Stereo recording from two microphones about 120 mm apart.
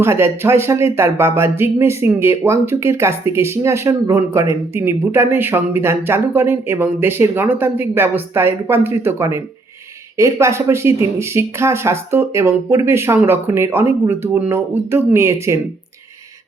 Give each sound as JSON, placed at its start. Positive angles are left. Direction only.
{"t": 0.0, "sound": "speech", "side_deg": -20}